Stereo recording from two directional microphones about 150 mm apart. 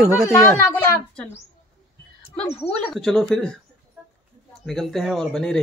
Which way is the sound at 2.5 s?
40° left (ahead or behind).